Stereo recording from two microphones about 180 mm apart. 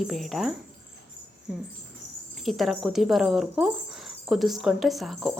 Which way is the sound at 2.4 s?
Centre (ahead or behind).